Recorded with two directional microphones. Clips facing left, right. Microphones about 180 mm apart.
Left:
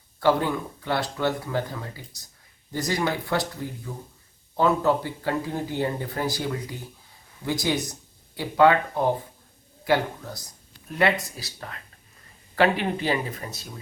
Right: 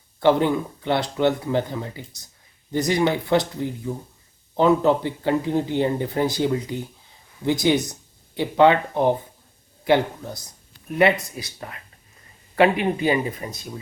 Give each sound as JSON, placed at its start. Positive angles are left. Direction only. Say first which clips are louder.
{"t": 0.2, "sound": "speech", "louder": "right 4 dB", "side_deg": -20}
{"t": 4.5, "sound": "speech", "louder": "right 4 dB", "side_deg": -20}
{"t": 11.0, "sound": "speech", "louder": "right 4 dB", "side_deg": -20}
{"t": 12.8, "sound": "speech", "louder": "right 5 dB", "side_deg": -10}